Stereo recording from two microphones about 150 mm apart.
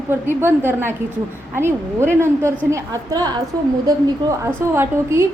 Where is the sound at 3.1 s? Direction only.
30° right (ahead or behind).